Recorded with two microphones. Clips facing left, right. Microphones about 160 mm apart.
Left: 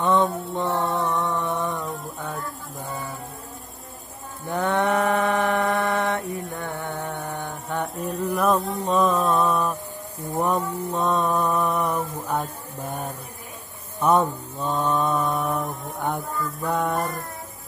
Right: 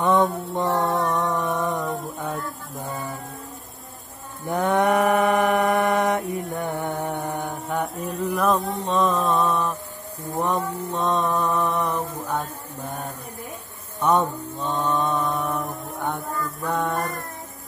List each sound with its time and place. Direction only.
0.0 s mantra: 15° right (ahead or behind)
4.5 s mantra: 15° right (ahead or behind)
7.7 s music: centre (ahead or behind)
8.4 s a sound: centre (ahead or behind)
8.8 s music: 10° left (ahead or behind)
12.3 s mantra: 10° left (ahead or behind)